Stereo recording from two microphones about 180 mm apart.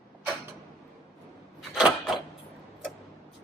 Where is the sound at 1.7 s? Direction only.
5° right (ahead or behind).